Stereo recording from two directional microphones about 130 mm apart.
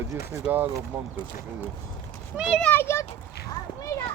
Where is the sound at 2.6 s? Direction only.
15° left (ahead or behind).